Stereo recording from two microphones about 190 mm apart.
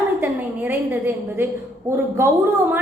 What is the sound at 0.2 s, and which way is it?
A woman's voice, 10° right (ahead or behind).